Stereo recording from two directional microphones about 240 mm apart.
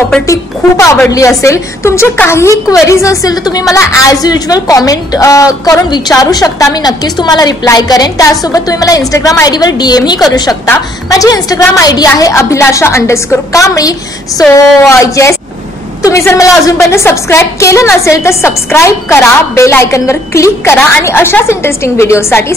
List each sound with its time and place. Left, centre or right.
0.3 s a woman's voice: centre